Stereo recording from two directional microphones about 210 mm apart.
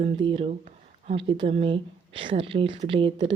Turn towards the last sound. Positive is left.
turn(degrees=-25)  # may be behind; listen again after turning